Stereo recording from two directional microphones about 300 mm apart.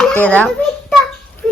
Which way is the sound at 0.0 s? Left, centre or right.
Centre.